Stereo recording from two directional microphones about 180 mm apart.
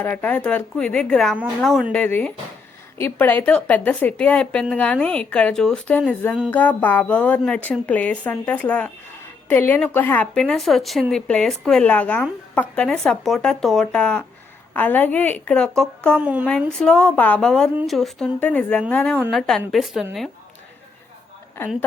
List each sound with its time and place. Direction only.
0.0 s a woman's voice: 10° left (ahead or behind)
16.2 s a woman's voice: 10° right (ahead or behind)
16.5 s a woman's voice: 5° left (ahead or behind)